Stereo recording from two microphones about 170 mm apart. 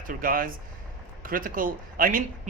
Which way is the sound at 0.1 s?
55° right (ahead or behind).